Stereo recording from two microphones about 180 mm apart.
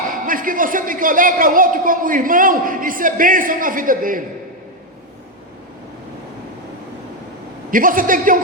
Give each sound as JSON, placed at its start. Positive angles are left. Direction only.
{"t": 0.3, "sound": "a man's voice", "side_deg": -50}
{"t": 7.7, "sound": "a man's voice", "side_deg": -50}